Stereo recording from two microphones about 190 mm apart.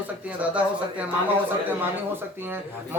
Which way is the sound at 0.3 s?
5° right (ahead or behind).